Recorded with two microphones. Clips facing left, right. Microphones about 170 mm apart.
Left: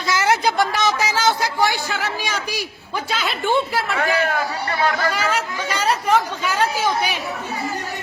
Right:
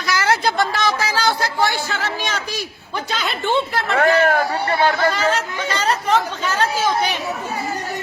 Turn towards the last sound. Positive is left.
turn(degrees=10)  # may be behind; listen again after turning